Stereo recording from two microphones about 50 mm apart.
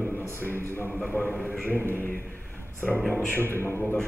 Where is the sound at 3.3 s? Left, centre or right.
Left.